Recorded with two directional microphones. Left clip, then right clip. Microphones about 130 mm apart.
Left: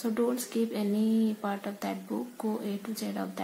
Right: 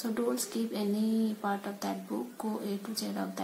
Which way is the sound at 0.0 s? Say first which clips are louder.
Left 3 dB; 25° left (ahead or behind).